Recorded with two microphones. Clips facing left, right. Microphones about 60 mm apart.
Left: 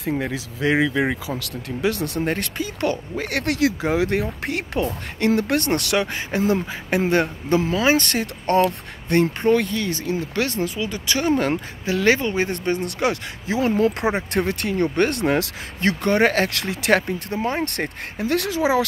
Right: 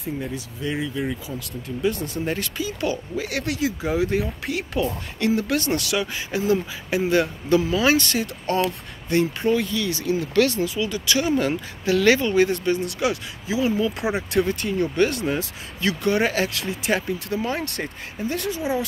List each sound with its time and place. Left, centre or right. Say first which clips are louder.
0.0 s speech: left 5 dB; left
1.4 s speech: right 2 dB; left
8.0 s speech: left 1 dB; left
11.8 s speech: right 1 dB; left
14.1 s speech: even; left
14.5 s speech: left 2 dB; left
15.8 s speech: left 3 dB; left
17.3 s speech: left 3 dB; left
17.6 s speech: left 3 dB; left